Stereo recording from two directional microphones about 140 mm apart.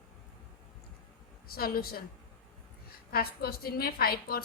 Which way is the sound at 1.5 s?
90° left.